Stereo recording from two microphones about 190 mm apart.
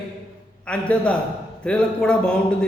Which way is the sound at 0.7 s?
5° left (ahead or behind).